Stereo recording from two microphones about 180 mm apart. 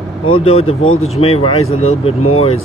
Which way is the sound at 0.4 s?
30° left (ahead or behind).